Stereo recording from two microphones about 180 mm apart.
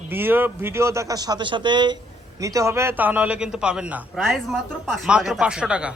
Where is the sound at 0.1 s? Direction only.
10° right (ahead or behind).